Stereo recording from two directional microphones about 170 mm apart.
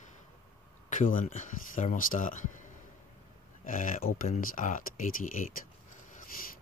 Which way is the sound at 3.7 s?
50° left (ahead or behind).